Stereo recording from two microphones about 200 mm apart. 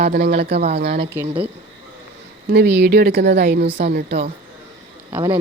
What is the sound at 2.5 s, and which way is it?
A woman's voice, 55° right (ahead or behind).